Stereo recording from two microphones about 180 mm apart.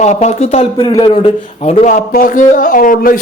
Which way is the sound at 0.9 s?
20° left (ahead or behind).